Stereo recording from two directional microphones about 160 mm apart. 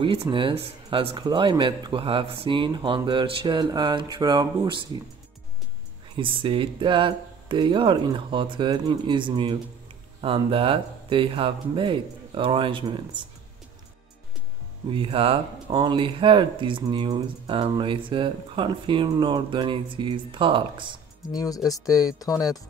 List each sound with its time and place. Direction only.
0.0 s speech: 35° right (ahead or behind)
6.1 s speech: 30° right (ahead or behind)
14.9 s speech: 35° right (ahead or behind)
21.3 s speech: 25° left (ahead or behind)